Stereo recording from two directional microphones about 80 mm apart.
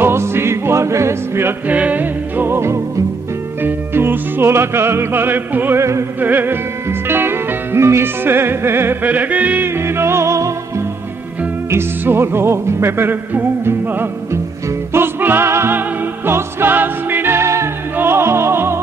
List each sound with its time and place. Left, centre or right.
0.0 s music: right
1.7 s music: centre
5.8 s music: right
6.2 s music: right
9.8 s music: right
11.7 s music: right